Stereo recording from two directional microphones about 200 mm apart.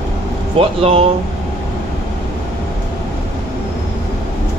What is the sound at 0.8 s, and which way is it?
Speech, 30° right (ahead or behind).